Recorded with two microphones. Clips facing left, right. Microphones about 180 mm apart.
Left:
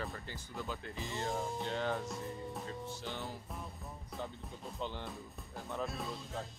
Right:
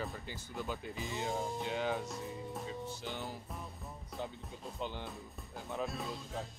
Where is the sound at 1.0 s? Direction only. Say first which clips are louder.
Even; centre (ahead or behind).